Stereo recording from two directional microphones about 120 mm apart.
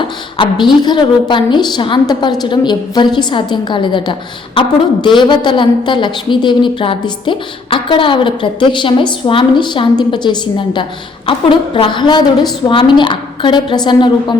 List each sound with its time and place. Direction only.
0.0 s a woman's voice: 40° left (ahead or behind)